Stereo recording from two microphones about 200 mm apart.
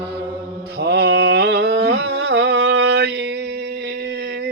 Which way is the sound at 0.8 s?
55° right (ahead or behind).